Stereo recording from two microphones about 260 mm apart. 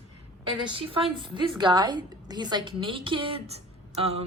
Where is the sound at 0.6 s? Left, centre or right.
Centre.